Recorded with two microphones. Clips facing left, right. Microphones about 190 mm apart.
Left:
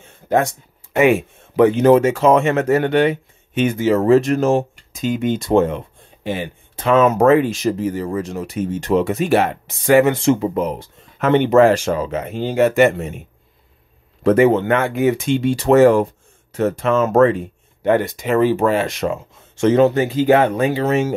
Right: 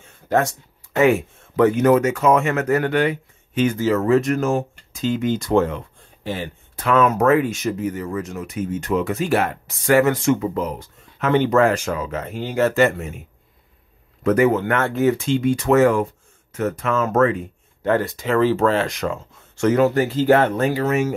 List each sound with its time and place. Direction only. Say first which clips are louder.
0.0 s a sound: left 2 dB; 15° left (ahead or behind)
0.9 s speech: left 2 dB; 20° left (ahead or behind)
14.2 s speech: left 4 dB; 25° left (ahead or behind)
17.8 s speech: left 3 dB; 20° left (ahead or behind)
18.9 s speech: left 3 dB; 25° left (ahead or behind)
20.7 s speech: left 2 dB; 25° left (ahead or behind)